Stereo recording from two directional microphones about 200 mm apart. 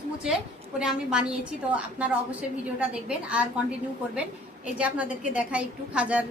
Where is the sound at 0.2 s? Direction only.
5° right (ahead or behind).